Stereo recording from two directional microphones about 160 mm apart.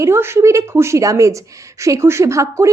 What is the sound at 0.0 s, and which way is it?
A woman's voice, 15° right (ahead or behind).